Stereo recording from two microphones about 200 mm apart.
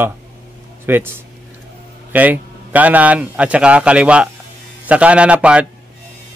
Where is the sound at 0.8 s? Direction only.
10° right (ahead or behind).